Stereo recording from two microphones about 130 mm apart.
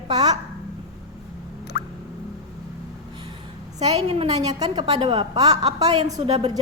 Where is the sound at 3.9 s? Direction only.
45° right (ahead or behind).